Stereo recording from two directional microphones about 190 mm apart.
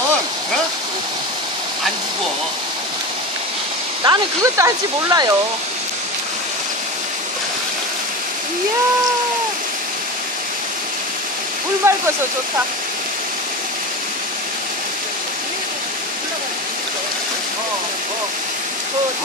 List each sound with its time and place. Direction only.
4.0 s speech: 20° right (ahead or behind)
11.8 s speech: 15° right (ahead or behind)